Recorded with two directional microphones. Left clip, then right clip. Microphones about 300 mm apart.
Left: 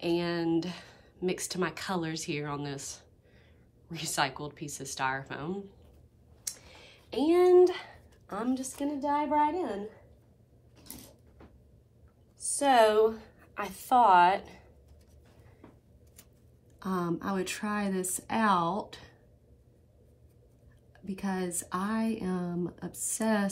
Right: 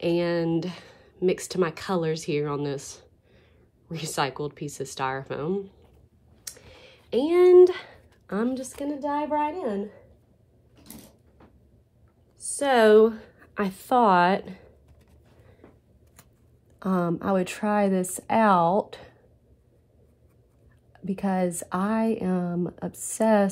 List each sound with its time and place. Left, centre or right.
0.0 s speech: right
12.4 s a woman's voice: right
16.8 s speech: right
20.9 s speech: right